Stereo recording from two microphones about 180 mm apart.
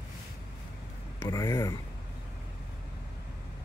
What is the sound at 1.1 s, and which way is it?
Speech, 20° left (ahead or behind).